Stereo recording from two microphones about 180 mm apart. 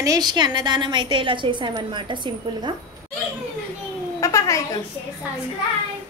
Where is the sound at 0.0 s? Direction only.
20° right (ahead or behind).